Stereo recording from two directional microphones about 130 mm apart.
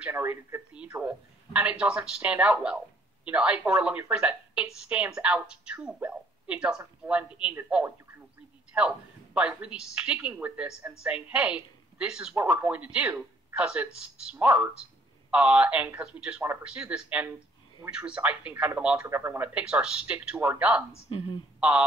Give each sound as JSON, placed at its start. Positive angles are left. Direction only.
{"t": 0.0, "sound": "a woman's voice", "side_deg": -15}
{"t": 8.7, "sound": "speech", "side_deg": -10}
{"t": 21.1, "sound": "speech", "side_deg": 45}
{"t": 21.5, "sound": "speech", "side_deg": -5}